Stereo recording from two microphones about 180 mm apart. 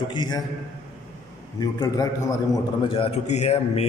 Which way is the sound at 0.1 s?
25° left (ahead or behind).